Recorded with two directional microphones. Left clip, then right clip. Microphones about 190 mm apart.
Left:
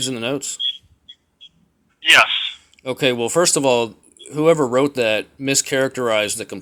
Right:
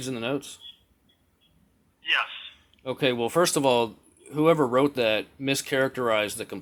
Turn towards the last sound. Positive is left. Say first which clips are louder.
# left 6 dB
turn(degrees=20)  # may be behind; listen again after turning